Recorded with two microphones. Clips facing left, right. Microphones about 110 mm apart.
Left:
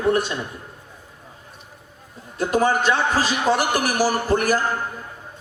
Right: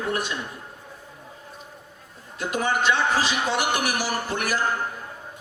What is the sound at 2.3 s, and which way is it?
A man's voice, 40° left (ahead or behind).